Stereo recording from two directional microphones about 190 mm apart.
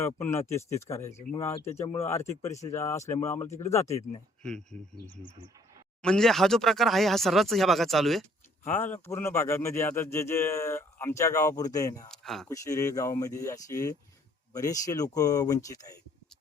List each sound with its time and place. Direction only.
0.0 s speech: 10° left (ahead or behind)
4.4 s speech: 5° left (ahead or behind)
6.0 s speech: 5° left (ahead or behind)
8.7 s speech: 10° left (ahead or behind)
12.1 s speech: centre (ahead or behind)
12.5 s speech: 15° left (ahead or behind)